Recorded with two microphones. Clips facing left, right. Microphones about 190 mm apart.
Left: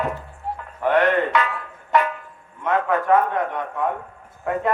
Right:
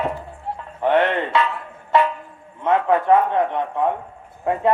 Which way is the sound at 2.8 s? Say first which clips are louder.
Right 2 dB; 25° right (ahead or behind).